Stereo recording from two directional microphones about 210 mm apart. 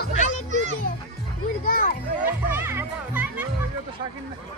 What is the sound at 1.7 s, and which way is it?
Children playing, 45° left (ahead or behind).